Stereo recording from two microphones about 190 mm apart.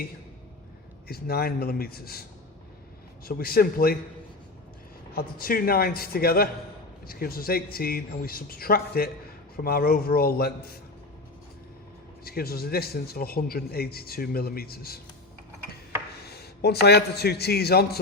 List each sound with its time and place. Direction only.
1.0 s a man's voice: 55° left (ahead or behind)
3.2 s a man's voice: 50° left (ahead or behind)
5.1 s a man's voice: 50° left (ahead or behind)
12.2 s a man's voice: 55° left (ahead or behind)
16.2 s a man's voice: 55° left (ahead or behind)